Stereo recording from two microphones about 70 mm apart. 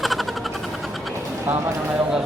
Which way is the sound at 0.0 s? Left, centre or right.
Centre.